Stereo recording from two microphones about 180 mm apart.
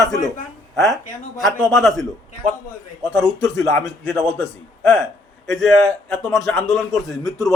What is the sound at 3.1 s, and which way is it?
Speech, 5° right (ahead or behind).